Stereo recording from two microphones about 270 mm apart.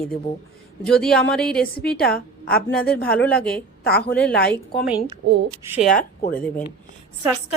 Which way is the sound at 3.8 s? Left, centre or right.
Left.